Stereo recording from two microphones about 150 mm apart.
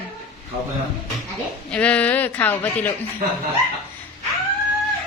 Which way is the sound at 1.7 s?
10° left (ahead or behind).